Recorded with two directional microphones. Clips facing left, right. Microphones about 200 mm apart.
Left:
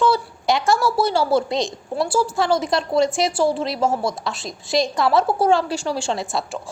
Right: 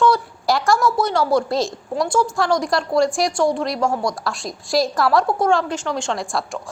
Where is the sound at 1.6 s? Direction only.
Centre (ahead or behind).